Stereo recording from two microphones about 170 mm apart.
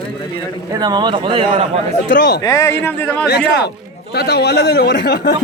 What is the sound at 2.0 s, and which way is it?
Speech, 90° left.